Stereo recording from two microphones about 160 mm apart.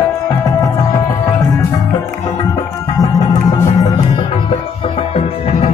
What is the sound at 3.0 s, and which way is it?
Music, 20° left (ahead or behind).